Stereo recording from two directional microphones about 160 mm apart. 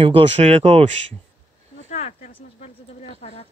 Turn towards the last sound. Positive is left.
turn(degrees=45)  # may be behind; listen again after turning